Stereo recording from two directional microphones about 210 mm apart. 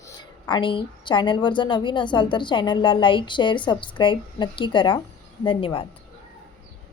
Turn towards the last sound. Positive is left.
turn(degrees=25)  # may be behind; listen again after turning